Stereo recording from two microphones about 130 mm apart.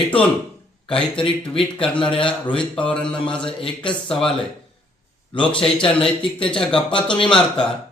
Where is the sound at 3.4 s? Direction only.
40° left (ahead or behind).